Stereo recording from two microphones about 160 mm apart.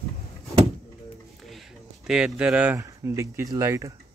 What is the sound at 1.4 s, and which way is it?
Speech, centre (ahead or behind).